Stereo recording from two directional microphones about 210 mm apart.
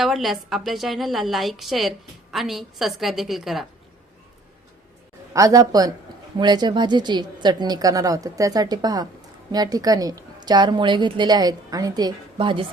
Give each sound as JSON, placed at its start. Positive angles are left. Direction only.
{"t": 0.0, "sound": "a woman's voice", "side_deg": 0}
{"t": 5.3, "sound": "a woman's voice", "side_deg": -15}